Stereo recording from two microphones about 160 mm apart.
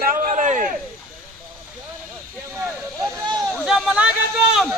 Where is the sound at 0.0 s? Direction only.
60° right (ahead or behind).